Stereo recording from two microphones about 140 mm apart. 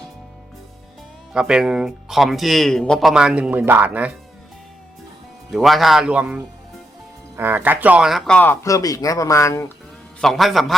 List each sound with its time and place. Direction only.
1.3 s speech: 5° right (ahead or behind)
5.5 s speech: centre (ahead or behind)
8.6 s speech: 25° left (ahead or behind)
10.2 s speech: centre (ahead or behind)